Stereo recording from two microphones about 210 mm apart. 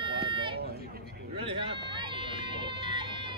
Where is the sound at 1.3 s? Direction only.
25° right (ahead or behind).